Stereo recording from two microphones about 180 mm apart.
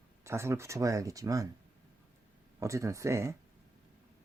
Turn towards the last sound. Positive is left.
turn(degrees=-15)  # may be behind; listen again after turning